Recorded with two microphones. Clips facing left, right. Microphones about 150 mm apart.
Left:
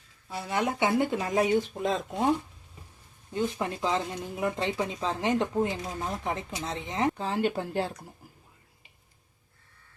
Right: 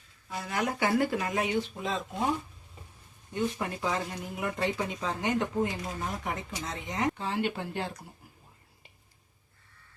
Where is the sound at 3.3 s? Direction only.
25° left (ahead or behind).